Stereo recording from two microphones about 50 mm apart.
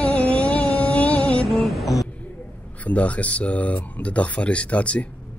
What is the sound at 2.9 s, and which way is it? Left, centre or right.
Speech, left.